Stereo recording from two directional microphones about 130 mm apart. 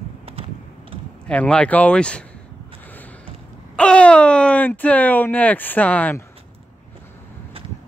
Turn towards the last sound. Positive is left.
turn(degrees=10)  # may be behind; listen again after turning